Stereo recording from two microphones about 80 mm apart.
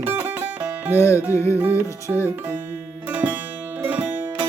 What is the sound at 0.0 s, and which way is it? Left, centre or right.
Music, right.